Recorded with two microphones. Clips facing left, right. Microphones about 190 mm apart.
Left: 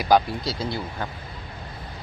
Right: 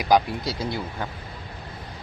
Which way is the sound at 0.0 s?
15° right (ahead or behind).